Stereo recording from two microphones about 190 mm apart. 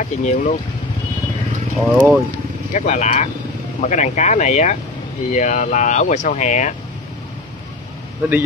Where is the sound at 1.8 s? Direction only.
5° right (ahead or behind).